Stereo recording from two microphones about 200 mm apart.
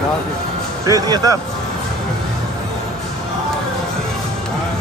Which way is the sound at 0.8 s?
20° right (ahead or behind).